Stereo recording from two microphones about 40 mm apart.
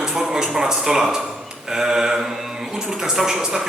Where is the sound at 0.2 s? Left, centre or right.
Centre.